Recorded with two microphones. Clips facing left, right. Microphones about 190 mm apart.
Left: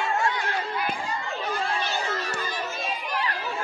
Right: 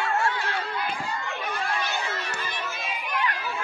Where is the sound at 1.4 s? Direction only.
30° left (ahead or behind).